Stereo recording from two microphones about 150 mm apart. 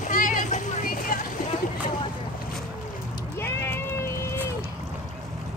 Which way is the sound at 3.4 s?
15° left (ahead or behind).